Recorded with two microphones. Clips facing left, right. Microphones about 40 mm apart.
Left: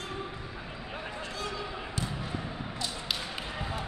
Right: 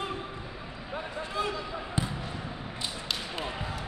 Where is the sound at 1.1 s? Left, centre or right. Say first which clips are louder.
Right 7 dB; centre.